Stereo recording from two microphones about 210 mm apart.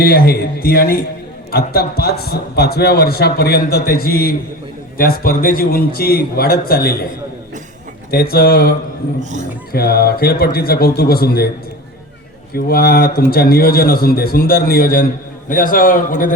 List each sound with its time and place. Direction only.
0.0 s a man's voice: 45° left (ahead or behind)
8.1 s a man's voice: 45° left (ahead or behind)
9.7 s a man's voice: 45° left (ahead or behind)
12.5 s a man's voice: 45° left (ahead or behind)